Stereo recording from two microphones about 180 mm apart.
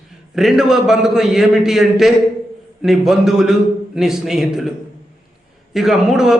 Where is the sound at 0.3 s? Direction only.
Centre (ahead or behind).